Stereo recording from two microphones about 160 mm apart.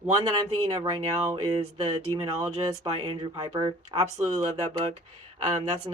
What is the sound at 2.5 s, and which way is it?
Speech, 35° right (ahead or behind).